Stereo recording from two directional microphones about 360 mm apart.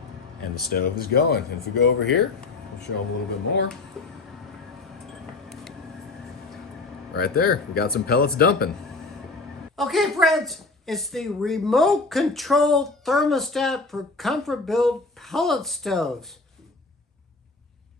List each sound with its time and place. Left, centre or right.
0.4 s speech: left
4.0 s a woman's voice: centre
7.1 s speech: left
9.7 s a woman's voice: centre